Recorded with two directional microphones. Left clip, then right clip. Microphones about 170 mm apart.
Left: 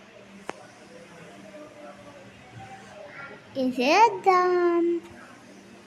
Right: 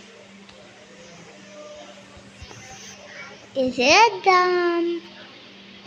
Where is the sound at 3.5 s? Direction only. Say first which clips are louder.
Right 5 dB; 5° right (ahead or behind).